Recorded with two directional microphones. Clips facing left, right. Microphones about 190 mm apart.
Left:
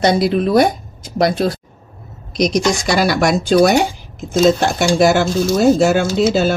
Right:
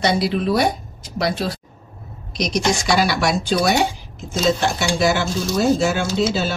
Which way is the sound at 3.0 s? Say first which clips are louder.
Left 4 dB; 45° left (ahead or behind).